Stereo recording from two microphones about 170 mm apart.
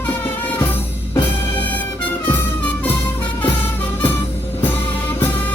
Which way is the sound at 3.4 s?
10° left (ahead or behind).